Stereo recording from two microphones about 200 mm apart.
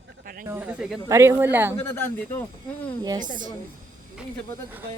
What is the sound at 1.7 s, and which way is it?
Speech, 10° left (ahead or behind).